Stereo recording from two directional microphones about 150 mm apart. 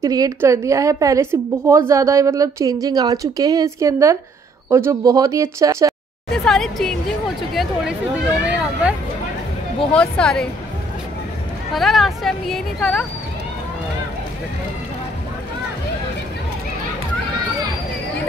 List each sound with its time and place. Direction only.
0.0 s a woman's voice: 20° right (ahead or behind)
6.3 s speech: 5° left (ahead or behind)
9.9 s speech: 5° left (ahead or behind)
11.7 s speech: centre (ahead or behind)